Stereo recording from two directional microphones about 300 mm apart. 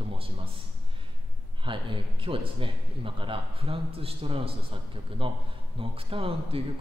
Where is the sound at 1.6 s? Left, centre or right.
Centre.